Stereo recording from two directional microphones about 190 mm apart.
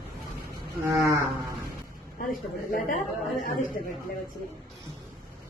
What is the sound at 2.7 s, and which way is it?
Speech, 45° left (ahead or behind).